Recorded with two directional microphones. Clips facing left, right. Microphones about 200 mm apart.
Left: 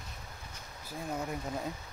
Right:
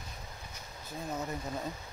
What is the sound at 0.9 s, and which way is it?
Speech, 10° left (ahead or behind).